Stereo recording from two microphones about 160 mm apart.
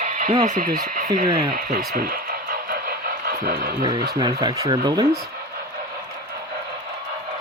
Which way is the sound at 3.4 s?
75° right (ahead or behind).